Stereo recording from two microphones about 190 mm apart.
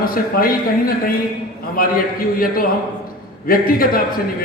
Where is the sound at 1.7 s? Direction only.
50° left (ahead or behind).